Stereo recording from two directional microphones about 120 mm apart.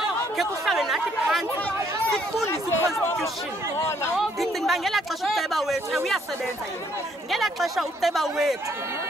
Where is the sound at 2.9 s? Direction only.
25° left (ahead or behind).